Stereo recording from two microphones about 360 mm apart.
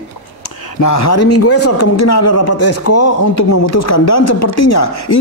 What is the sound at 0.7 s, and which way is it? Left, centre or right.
Speech, left.